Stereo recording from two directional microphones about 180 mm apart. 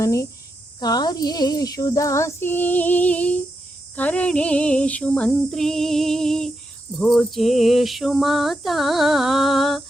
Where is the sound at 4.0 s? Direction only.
10° left (ahead or behind).